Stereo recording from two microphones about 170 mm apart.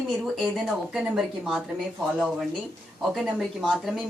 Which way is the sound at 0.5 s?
Centre (ahead or behind).